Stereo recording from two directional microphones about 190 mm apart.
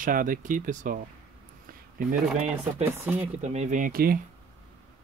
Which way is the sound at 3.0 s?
10° right (ahead or behind).